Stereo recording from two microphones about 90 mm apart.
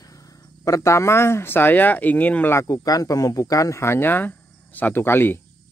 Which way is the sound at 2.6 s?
45° left (ahead or behind).